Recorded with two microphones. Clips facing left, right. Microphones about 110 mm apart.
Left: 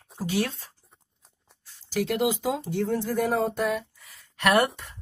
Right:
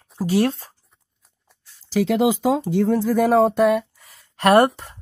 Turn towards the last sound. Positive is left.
turn(degrees=-35)  # may be behind; listen again after turning